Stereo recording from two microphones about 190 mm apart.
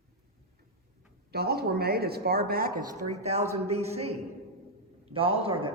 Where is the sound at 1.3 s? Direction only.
55° right (ahead or behind).